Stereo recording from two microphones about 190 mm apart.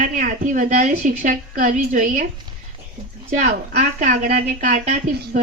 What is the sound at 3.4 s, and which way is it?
Speech, 40° right (ahead or behind).